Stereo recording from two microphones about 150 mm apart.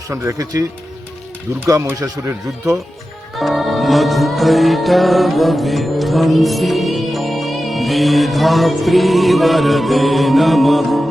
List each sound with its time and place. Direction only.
0.1 s speech: 20° right (ahead or behind)
3.3 s music: centre (ahead or behind)